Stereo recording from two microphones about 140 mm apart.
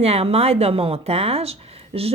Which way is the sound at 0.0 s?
45° right (ahead or behind).